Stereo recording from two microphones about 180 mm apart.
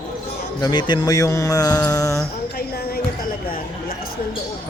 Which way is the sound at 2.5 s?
60° left (ahead or behind).